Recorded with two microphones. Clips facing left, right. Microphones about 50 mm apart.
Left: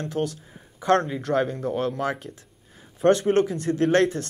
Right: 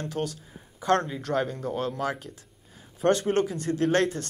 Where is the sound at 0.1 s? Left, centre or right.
Left.